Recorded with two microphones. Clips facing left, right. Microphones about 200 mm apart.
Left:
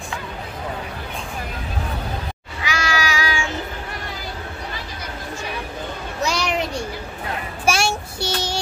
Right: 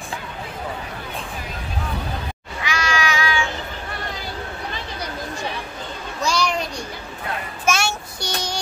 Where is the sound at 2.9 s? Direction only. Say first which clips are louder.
Right 2 dB; 40° left (ahead or behind).